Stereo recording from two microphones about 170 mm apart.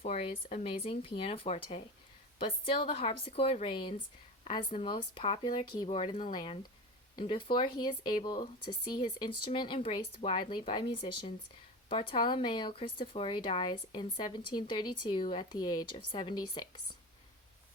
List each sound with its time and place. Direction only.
0.0 s a woman's voice: 40° left (ahead or behind)